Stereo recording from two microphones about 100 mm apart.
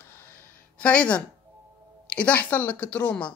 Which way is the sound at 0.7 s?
10° left (ahead or behind).